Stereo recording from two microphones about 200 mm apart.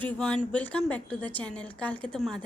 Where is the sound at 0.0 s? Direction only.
5° left (ahead or behind).